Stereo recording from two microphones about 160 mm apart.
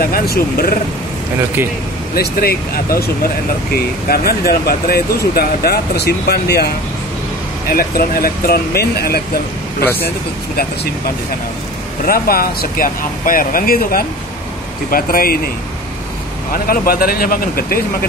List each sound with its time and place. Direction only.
0.0 s speech: 70° left (ahead or behind)
2.1 s speech: 65° left (ahead or behind); by 6.7 s 85° left
7.6 s speech: 65° left (ahead or behind)
12.0 s speech: 65° left (ahead or behind)
16.5 s speech: 65° left (ahead or behind)